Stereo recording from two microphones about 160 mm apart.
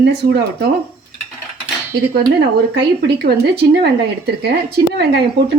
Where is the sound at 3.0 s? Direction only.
90° right.